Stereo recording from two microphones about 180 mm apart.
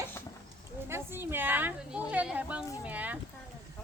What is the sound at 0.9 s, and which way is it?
A woman's voice, 10° right (ahead or behind).